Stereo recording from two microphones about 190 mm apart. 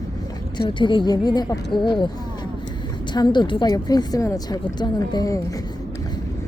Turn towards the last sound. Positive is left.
turn(degrees=20)  # may be behind; listen again after turning